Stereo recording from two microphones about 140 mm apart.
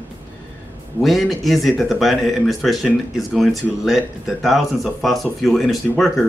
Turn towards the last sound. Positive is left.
turn(degrees=0)  # may be behind; listen again after turning